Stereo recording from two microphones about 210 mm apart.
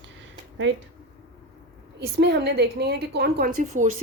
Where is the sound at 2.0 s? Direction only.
50° right (ahead or behind).